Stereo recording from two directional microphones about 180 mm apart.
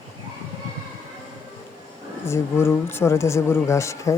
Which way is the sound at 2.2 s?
15° left (ahead or behind).